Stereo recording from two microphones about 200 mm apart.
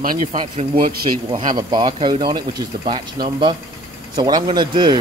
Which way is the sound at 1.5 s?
20° right (ahead or behind).